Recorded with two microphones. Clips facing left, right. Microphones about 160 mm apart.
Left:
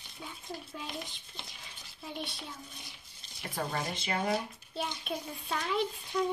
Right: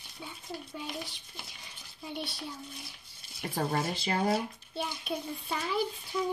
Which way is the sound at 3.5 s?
35° right (ahead or behind).